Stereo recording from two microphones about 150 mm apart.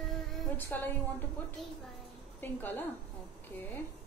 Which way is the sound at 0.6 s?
10° left (ahead or behind).